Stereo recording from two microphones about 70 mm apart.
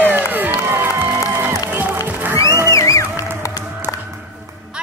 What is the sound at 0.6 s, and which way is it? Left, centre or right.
Music, right.